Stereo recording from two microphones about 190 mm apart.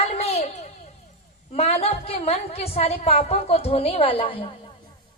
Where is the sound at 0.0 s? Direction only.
35° left (ahead or behind).